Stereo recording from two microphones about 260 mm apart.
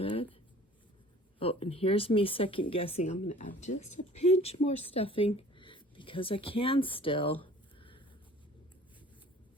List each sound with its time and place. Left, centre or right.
0.0 s writing: centre
1.4 s speech: left
3.8 s speech: left
4.2 s speech: left
7.4 s a sound: centre